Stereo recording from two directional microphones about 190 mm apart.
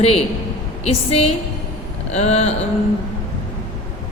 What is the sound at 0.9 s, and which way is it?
A woman's voice, 35° left (ahead or behind).